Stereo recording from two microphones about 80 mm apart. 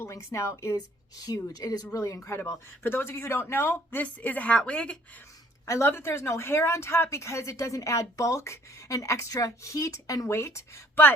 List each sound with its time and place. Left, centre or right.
0.0 s speech: left
1.2 s speech: left
3.9 s a woman's voice: centre
5.6 s speech: left